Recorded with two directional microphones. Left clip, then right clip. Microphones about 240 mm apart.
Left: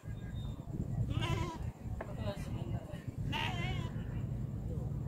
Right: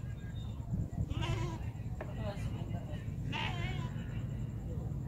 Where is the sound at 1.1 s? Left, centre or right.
Left.